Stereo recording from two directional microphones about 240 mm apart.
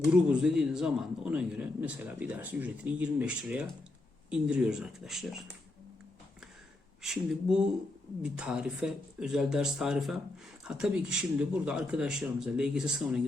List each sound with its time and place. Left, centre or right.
0.3 s a man's voice: centre
7.0 s a man's voice: centre